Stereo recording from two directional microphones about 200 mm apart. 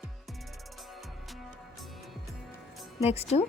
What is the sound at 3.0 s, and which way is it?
Speech, 30° left (ahead or behind).